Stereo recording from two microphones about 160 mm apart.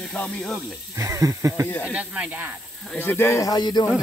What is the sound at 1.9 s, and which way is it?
Speech, 10° right (ahead or behind).